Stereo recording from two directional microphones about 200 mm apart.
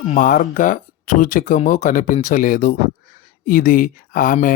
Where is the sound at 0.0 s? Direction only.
40° left (ahead or behind).